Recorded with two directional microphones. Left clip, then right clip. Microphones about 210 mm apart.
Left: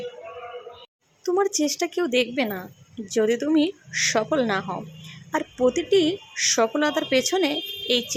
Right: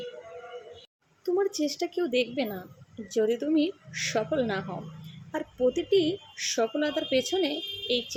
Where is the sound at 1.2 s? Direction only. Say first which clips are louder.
Left 5 dB; 5° left (ahead or behind).